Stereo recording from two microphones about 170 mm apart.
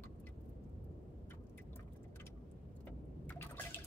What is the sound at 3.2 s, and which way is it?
Water, 10° left (ahead or behind).